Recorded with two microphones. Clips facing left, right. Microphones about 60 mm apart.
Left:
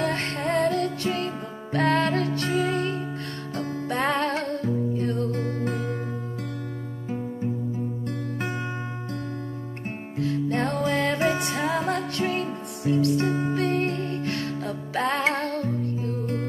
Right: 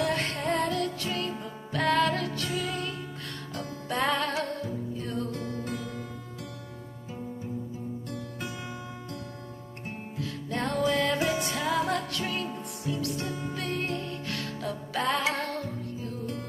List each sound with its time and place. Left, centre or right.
0.1 s music: left
0.6 s music: left
0.8 s music: left
5.3 s music: left
10.1 s music: left
10.6 s music: left
11.1 s music: left
12.9 s music: left
13.2 s music: left